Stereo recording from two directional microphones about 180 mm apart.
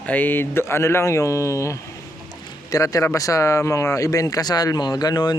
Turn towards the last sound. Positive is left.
turn(degrees=25)  # may be behind; listen again after turning